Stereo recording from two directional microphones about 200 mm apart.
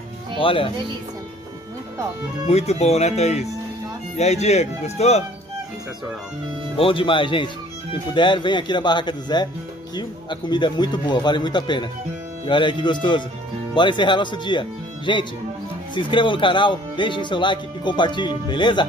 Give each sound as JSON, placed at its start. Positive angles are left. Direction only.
{"t": 0.4, "sound": "speech", "side_deg": 25}
{"t": 2.4, "sound": "speech", "side_deg": 30}
{"t": 6.8, "sound": "speech", "side_deg": 25}